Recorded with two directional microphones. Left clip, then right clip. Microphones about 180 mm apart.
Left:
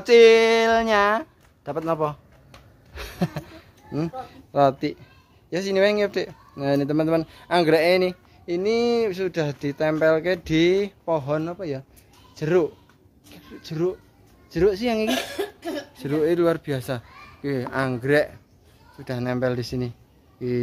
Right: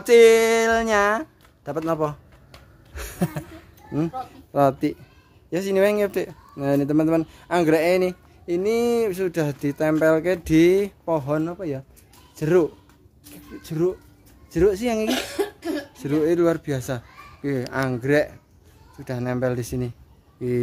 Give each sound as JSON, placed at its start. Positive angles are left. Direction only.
{"t": 0.0, "sound": "speech", "side_deg": 0}
{"t": 2.9, "sound": "a sound", "side_deg": 0}
{"t": 4.3, "sound": "speech", "side_deg": -5}
{"t": 8.5, "sound": "speech", "side_deg": -5}
{"t": 12.4, "sound": "speech", "side_deg": -10}
{"t": 15.0, "sound": "speech", "side_deg": 55}
{"t": 16.0, "sound": "speech", "side_deg": 0}